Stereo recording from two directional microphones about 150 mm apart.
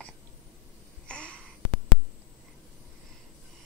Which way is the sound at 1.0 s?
5° left (ahead or behind).